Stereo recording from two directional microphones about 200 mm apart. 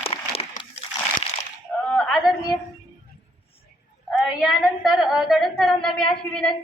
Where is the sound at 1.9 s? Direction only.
Centre (ahead or behind).